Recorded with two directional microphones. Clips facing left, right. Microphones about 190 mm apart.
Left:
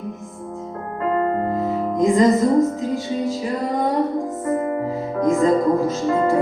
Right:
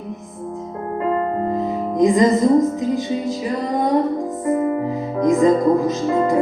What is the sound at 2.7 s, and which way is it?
Speech, 15° right (ahead or behind).